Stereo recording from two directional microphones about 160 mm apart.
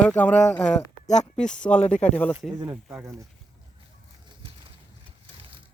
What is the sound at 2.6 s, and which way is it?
Speech, 15° right (ahead or behind).